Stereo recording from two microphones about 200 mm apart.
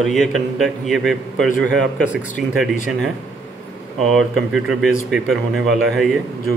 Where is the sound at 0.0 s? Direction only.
Centre (ahead or behind).